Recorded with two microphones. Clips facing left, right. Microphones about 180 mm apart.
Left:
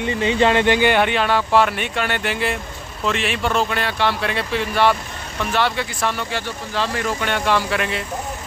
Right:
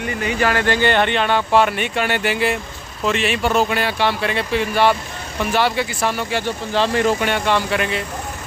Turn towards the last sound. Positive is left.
turn(degrees=0)  # may be behind; listen again after turning